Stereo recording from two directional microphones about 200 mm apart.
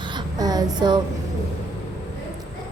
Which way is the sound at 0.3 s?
20° right (ahead or behind).